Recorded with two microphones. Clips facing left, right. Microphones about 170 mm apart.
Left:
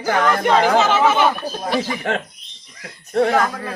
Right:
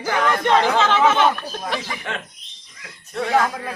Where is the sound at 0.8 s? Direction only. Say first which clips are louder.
Left 1 dB; 5° left (ahead or behind).